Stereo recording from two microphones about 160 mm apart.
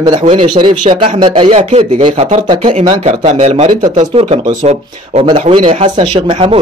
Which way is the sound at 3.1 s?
50° right (ahead or behind).